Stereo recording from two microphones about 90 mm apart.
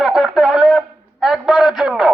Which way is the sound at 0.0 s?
Centre (ahead or behind).